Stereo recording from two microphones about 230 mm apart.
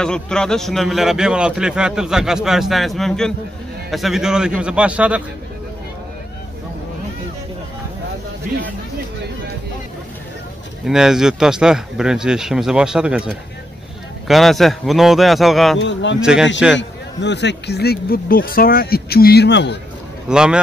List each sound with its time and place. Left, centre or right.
0.0 s speech: centre
10.9 s speech: centre
15.8 s speech: left
16.2 s speech: centre
16.7 s speech: left
20.2 s speech: centre